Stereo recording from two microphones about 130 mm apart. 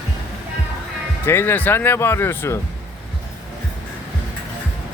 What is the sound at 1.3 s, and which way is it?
Speech, 15° left (ahead or behind).